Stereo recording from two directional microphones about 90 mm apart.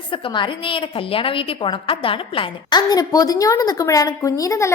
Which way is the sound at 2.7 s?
50° left (ahead or behind).